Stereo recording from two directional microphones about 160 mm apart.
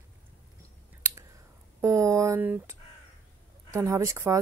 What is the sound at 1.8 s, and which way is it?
Speech, 20° right (ahead or behind).